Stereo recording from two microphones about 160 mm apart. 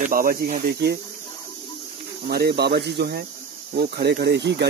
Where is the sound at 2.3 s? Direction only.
85° right.